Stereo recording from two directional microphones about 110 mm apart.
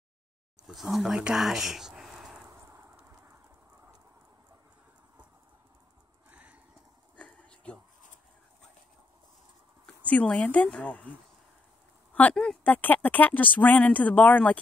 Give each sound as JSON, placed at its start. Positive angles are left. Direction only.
{"t": 0.7, "sound": "speech", "side_deg": -5}
{"t": 2.6, "sound": "horse", "side_deg": -25}
{"t": 3.0, "sound": "train", "side_deg": -20}
{"t": 6.3, "sound": "horse", "side_deg": -15}
{"t": 7.2, "sound": "a sound", "side_deg": 10}
{"t": 10.0, "sound": "speech", "side_deg": 10}
{"t": 12.1, "sound": "speech", "side_deg": 15}